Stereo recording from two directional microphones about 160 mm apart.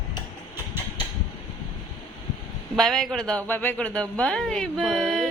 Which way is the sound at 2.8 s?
Centre (ahead or behind).